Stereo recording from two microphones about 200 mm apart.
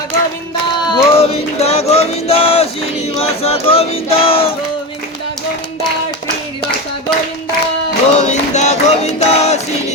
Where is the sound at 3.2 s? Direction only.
30° left (ahead or behind).